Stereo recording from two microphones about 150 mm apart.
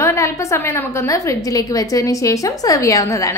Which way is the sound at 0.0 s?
20° left (ahead or behind).